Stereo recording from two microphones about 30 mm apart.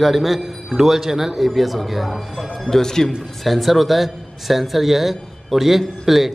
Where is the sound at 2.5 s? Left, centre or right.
Centre.